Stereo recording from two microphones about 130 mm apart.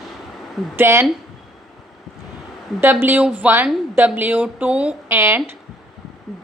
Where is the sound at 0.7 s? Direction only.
20° right (ahead or behind).